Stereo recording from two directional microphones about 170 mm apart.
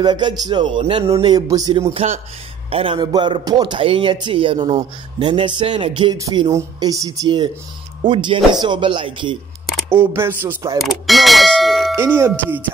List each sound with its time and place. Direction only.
0.0 s a man's voice: 25° right (ahead or behind)
1.1 s a man's voice: 20° right (ahead or behind)
2.0 s a man's voice: 35° right (ahead or behind)
6.1 s a man's voice: 20° right (ahead or behind)
9.8 s speech: 15° right (ahead or behind)
10.8 s clang: centre (ahead or behind)
12.0 s speech: 15° right (ahead or behind)